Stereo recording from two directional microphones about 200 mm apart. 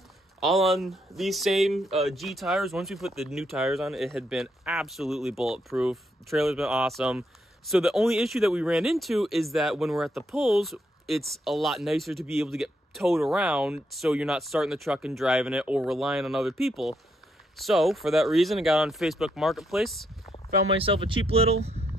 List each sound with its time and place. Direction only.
0.4 s speech: centre (ahead or behind)
20.7 s speech: 25° right (ahead or behind)